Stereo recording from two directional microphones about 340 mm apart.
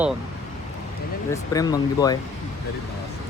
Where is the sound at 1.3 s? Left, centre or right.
Centre.